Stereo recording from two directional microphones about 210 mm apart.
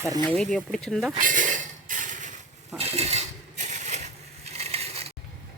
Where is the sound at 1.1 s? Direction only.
40° right (ahead or behind).